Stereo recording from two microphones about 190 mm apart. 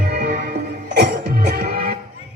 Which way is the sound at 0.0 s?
55° right (ahead or behind).